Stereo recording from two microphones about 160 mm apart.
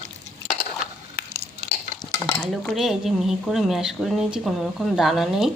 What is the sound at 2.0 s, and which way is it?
Stir, 20° left (ahead or behind).